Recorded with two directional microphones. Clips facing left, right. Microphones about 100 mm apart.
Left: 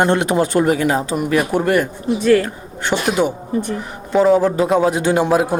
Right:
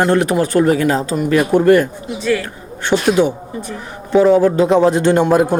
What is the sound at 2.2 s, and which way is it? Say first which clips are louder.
Speech: left 4 dB; 45° left (ahead or behind).